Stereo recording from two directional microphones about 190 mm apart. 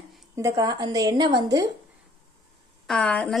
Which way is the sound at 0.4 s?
15° right (ahead or behind).